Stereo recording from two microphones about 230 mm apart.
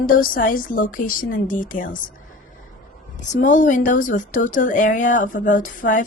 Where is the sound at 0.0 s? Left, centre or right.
Left.